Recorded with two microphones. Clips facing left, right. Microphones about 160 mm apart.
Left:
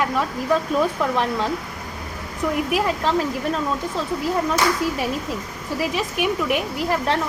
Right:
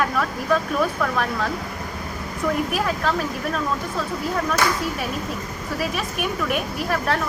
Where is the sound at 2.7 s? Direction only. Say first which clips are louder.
Left 2 dB; 20° left (ahead or behind).